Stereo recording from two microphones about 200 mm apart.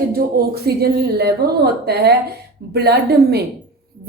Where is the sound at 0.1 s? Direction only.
50° right (ahead or behind).